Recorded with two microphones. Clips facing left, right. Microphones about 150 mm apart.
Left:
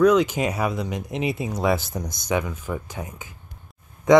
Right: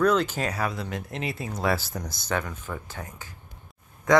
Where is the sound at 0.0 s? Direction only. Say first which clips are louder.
Left 5 dB; 15° left (ahead or behind).